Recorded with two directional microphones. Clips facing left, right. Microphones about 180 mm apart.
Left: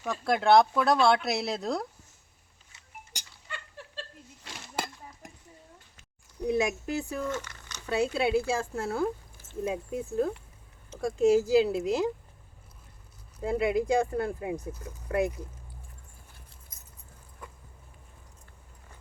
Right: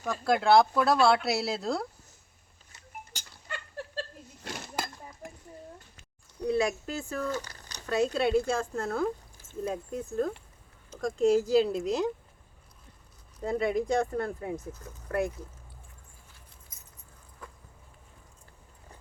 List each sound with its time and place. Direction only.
0.0 s speech: centre (ahead or behind)
4.4 s chink: 55° right (ahead or behind)
6.5 s speech: 15° left (ahead or behind)
7.3 s a sound: 35° right (ahead or behind)
7.9 s speech: 10° left (ahead or behind)
13.4 s speech: 5° left (ahead or behind)